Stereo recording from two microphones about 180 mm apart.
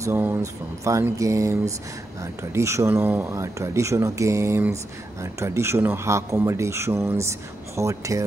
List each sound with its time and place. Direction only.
0.0 s speech: 10° right (ahead or behind)